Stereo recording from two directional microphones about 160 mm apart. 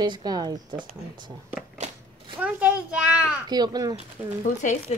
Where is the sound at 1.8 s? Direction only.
45° right (ahead or behind).